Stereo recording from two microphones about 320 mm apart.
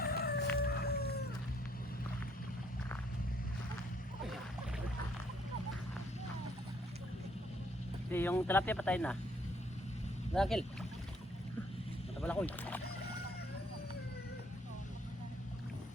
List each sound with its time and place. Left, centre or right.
0.0 s chicken: left
0.5 s whale vocalization: left
8.1 s speech: centre
10.3 s speech: centre
12.2 s speech: centre